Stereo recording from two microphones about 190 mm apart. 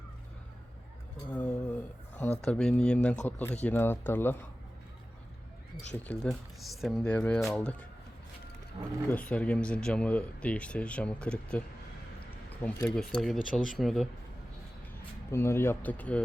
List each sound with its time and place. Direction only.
1.3 s a sound: 10° left (ahead or behind)
2.4 s speech: 5° left (ahead or behind)
5.9 s speech: 5° left (ahead or behind)
9.0 s speech: 5° left (ahead or behind)
15.3 s speech: 15° left (ahead or behind)